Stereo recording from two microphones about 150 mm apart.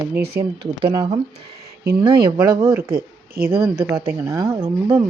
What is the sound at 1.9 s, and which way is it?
Speech, 90° right.